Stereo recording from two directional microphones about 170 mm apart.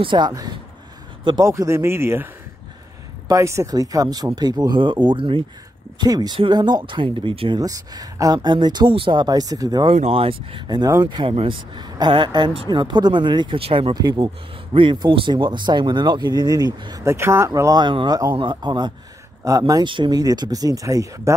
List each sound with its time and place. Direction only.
0.0 s speech: 25° right (ahead or behind)
3.3 s speech: 15° right (ahead or behind)
9.9 s speech: 35° right (ahead or behind); by 21.4 s 20° right (ahead or behind)